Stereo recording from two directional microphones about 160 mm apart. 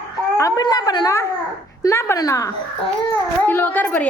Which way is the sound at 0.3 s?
20° left (ahead or behind).